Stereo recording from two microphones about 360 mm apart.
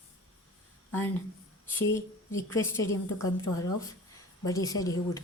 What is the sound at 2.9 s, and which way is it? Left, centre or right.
A woman's voice, centre.